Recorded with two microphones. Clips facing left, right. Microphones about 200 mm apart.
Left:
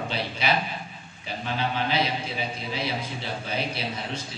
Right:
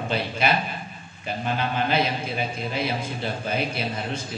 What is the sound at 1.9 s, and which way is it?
A man's voice, 50° right (ahead or behind).